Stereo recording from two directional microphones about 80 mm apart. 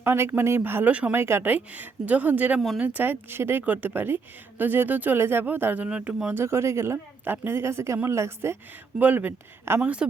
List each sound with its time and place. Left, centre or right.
0.0 s a woman's voice: right
6.3 s speech: right
9.0 s a woman's voice: right
9.8 s a woman's voice: centre